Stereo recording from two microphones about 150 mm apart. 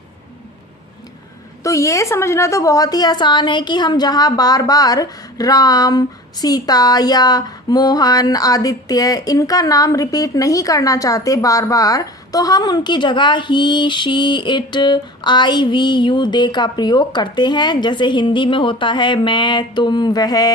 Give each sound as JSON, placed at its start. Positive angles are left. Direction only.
{"t": 1.6, "sound": "a woman's voice", "side_deg": 20}